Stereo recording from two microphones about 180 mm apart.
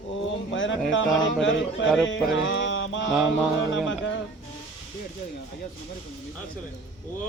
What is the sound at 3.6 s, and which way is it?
Music, 90° left.